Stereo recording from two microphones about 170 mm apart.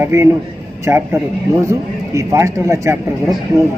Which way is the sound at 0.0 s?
15° right (ahead or behind).